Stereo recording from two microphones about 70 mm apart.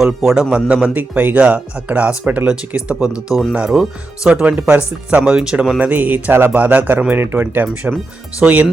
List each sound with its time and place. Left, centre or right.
0.0 s a man's voice: centre
0.5 s speech: centre
5.8 s speech: right